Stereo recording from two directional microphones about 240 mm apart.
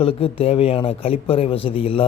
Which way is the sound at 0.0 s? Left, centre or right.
Left.